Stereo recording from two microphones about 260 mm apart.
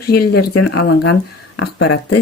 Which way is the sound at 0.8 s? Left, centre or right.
Left.